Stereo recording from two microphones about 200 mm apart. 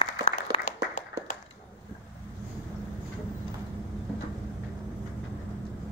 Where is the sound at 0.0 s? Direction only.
35° left (ahead or behind).